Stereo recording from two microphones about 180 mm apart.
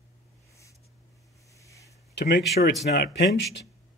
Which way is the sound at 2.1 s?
75° left (ahead or behind).